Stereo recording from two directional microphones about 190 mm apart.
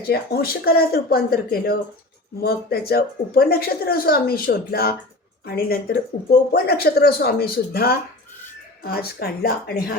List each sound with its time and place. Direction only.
0.1 s a woman's voice: 55° left (ahead or behind)